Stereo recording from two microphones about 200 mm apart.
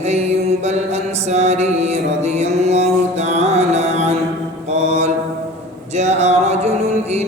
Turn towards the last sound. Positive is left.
turn(degrees=-35)  # may be behind; listen again after turning